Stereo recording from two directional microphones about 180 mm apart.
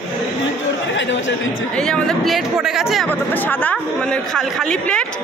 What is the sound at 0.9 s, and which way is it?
Chatter, 90° left.